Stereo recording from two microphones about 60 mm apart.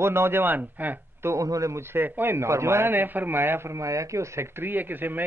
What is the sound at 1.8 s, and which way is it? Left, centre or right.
A man's voice, right.